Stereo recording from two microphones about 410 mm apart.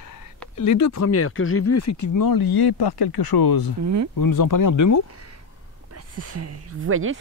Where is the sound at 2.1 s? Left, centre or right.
Left.